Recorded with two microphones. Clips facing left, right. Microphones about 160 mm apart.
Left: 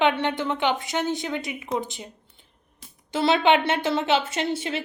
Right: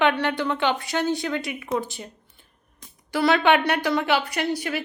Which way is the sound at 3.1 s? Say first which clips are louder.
Right 1 dB; 20° left (ahead or behind).